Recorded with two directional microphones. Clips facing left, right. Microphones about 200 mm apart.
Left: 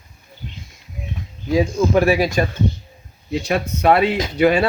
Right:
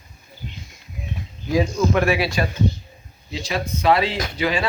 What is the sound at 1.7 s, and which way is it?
Speech, 35° left (ahead or behind).